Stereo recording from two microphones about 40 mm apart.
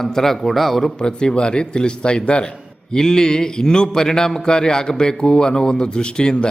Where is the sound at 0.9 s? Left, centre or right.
Centre.